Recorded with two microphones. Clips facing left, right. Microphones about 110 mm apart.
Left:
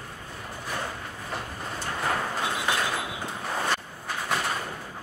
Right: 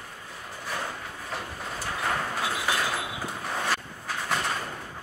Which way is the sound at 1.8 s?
Centre (ahead or behind).